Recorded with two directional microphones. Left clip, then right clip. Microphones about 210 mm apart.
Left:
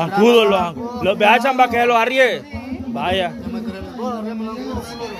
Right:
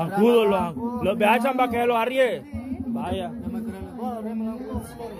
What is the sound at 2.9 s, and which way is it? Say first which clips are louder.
Speech: left 11 dB; 10° left (ahead or behind).